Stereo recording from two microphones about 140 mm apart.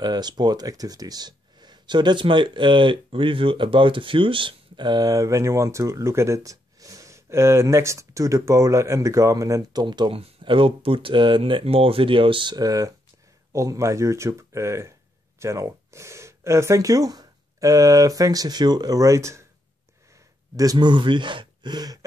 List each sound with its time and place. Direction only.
0.0 s speech: 30° right (ahead or behind)
20.5 s speech: 30° right (ahead or behind)